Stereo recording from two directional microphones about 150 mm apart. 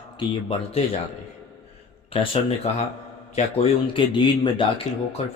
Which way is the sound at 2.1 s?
40° left (ahead or behind).